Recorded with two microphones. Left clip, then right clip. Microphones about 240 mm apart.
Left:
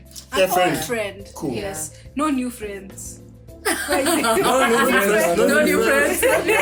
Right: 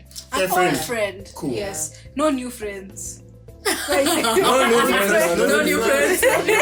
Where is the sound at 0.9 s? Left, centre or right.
Right.